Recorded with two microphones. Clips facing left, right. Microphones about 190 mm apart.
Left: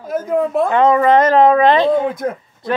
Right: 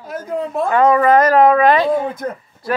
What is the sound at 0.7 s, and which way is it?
Speech, 20° left (ahead or behind).